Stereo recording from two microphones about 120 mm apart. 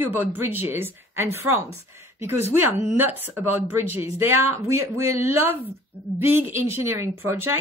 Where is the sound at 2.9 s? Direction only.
15° right (ahead or behind).